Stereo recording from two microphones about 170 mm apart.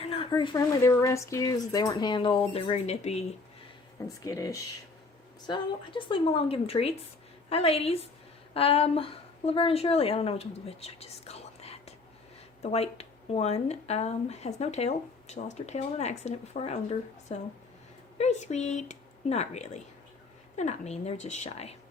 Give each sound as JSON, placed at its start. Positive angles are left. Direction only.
{"t": 0.0, "sound": "speech", "side_deg": 30}
{"t": 4.2, "sound": "a woman's voice", "side_deg": 20}